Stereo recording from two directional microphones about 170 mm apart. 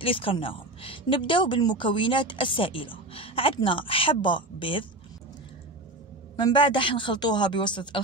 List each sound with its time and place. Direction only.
0.0 s a woman's voice: 30° left (ahead or behind)
6.3 s a woman's voice: 25° left (ahead or behind)